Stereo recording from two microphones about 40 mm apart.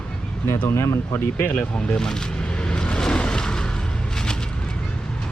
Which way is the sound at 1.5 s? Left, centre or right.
Left.